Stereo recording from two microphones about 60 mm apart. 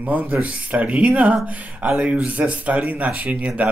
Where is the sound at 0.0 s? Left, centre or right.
Right.